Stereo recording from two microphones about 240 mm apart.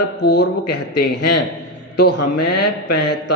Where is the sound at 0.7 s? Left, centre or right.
Left.